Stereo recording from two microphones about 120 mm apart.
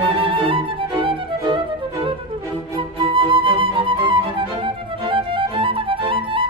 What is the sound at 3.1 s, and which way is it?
Music, 45° right (ahead or behind).